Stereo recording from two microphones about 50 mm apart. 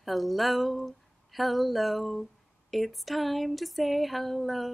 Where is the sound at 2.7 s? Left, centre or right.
Centre.